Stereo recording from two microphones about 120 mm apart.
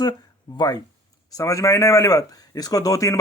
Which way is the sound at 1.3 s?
30° left (ahead or behind).